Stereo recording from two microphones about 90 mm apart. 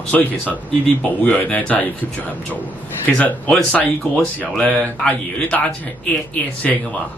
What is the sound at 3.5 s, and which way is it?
Speech, 10° left (ahead or behind).